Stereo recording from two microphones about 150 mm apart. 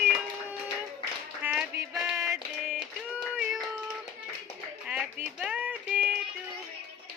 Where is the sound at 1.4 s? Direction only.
15° right (ahead or behind).